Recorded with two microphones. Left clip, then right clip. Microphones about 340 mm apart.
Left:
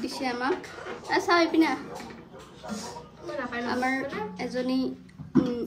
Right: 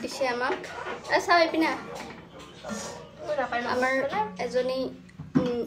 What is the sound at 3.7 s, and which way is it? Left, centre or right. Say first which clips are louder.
A woman's voice: right 1 dB; centre.